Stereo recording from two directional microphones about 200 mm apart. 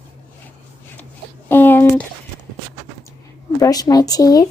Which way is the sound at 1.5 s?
10° left (ahead or behind).